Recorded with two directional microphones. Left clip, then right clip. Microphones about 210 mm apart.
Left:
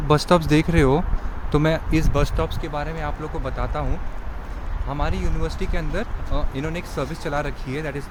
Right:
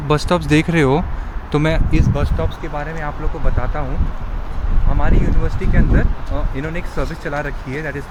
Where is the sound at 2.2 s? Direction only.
40° left (ahead or behind).